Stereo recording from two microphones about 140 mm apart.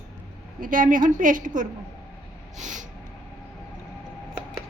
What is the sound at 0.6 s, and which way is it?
A woman's voice, 75° right (ahead or behind).